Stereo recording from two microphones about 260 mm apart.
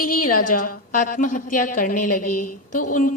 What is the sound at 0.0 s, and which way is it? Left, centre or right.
A woman's voice, left.